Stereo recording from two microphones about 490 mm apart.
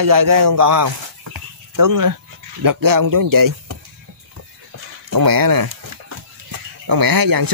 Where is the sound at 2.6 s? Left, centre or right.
Right.